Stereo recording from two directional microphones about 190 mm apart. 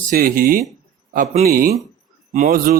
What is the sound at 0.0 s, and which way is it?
A man's voice, 45° right (ahead or behind).